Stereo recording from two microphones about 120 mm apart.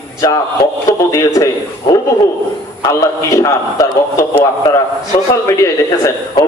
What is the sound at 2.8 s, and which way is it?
A man's voice, 25° left (ahead or behind).